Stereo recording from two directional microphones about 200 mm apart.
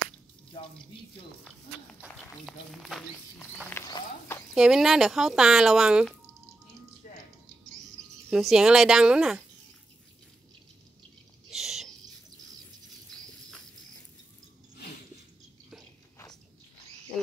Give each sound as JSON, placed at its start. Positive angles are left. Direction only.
{"t": 2.0, "sound": "speech", "side_deg": 0}
{"t": 3.7, "sound": "speech", "side_deg": 15}
{"t": 4.6, "sound": "speech", "side_deg": 0}
{"t": 8.3, "sound": "speech", "side_deg": 0}
{"t": 11.5, "sound": "a sound", "side_deg": 0}
{"t": 13.1, "sound": "patter", "side_deg": 5}